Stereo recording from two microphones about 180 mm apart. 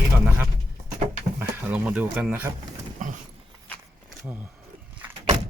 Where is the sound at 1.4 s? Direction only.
10° right (ahead or behind).